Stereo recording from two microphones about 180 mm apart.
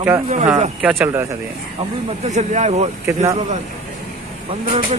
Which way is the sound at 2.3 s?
40° right (ahead or behind).